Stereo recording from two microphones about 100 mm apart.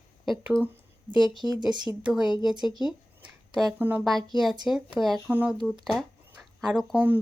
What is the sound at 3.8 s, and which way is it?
Speech, 20° right (ahead or behind).